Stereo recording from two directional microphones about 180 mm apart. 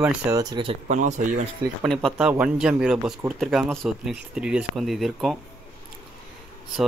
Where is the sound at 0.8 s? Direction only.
40° right (ahead or behind).